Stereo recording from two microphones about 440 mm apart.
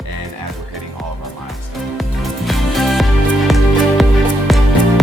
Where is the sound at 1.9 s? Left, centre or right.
Centre.